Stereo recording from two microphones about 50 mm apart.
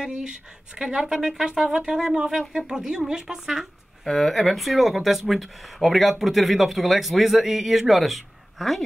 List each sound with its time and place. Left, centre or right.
0.0 s speech: centre
4.0 s speech: centre